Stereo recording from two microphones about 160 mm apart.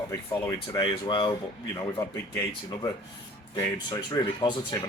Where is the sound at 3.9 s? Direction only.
30° left (ahead or behind).